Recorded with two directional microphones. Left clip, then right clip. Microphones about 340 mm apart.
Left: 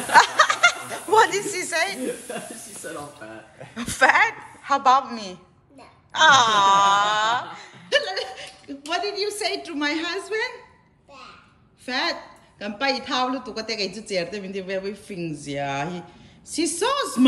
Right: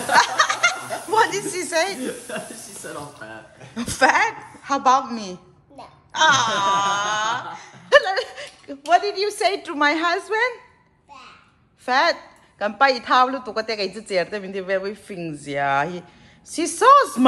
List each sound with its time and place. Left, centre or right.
0.1 s snicker: centre
3.7 s a woman's voice: centre
9.1 s a woman's voice: centre
9.7 s speech: centre
11.8 s a woman's voice: centre